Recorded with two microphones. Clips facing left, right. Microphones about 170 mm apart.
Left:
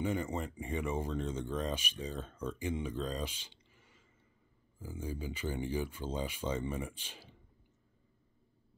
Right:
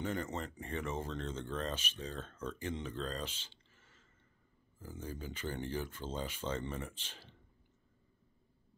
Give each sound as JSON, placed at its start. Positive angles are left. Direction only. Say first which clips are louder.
{"t": 0.0, "sound": "speech", "louder": "left 3 dB", "side_deg": 10}